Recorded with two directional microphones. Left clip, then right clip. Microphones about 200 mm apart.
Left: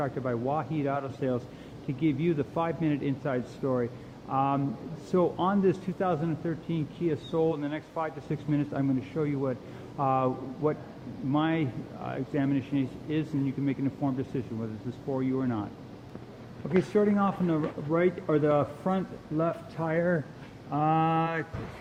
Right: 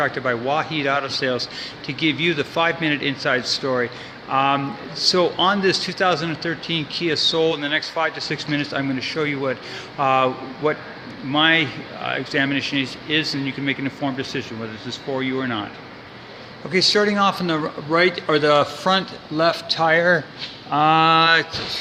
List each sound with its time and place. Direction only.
0.0 s speech: 15° right (ahead or behind)
3.6 s a man's voice: 20° right (ahead or behind)
4.3 s speech: 10° right (ahead or behind)
16.9 s speech: 5° right (ahead or behind)